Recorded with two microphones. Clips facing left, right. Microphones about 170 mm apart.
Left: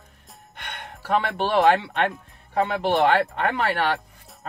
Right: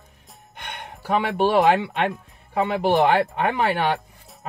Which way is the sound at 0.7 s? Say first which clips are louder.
Even; 15° right (ahead or behind).